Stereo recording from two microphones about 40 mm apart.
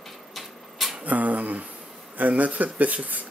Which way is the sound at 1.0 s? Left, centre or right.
Right.